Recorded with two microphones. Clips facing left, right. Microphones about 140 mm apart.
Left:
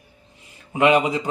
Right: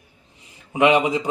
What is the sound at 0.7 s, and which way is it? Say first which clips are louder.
Speech: even; 15° right (ahead or behind).